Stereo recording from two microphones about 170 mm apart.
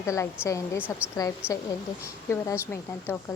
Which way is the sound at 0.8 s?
10° right (ahead or behind).